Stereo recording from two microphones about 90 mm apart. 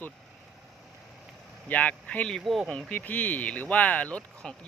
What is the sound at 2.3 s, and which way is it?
Speech, centre (ahead or behind).